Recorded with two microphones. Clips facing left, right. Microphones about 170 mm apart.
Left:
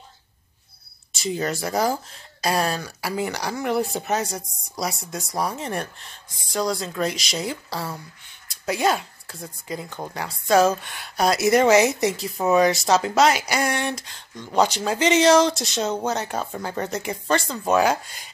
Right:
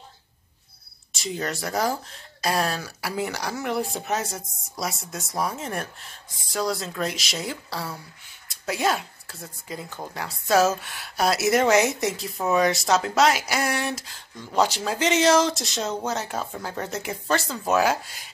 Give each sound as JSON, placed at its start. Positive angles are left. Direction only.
{"t": 1.1, "sound": "speech", "side_deg": 0}